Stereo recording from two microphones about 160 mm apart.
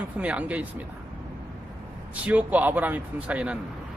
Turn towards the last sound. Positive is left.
turn(degrees=-10)  # may be behind; listen again after turning